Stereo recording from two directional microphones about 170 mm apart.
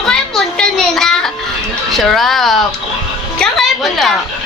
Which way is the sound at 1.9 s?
Centre (ahead or behind).